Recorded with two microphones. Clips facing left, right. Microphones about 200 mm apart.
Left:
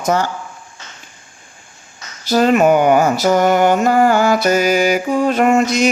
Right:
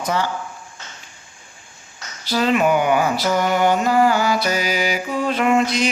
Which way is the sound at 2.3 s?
45° left (ahead or behind).